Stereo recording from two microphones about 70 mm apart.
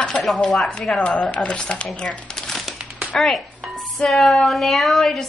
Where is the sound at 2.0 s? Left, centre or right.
Centre.